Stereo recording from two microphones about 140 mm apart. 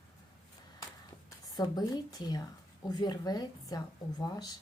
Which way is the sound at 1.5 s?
30° left (ahead or behind).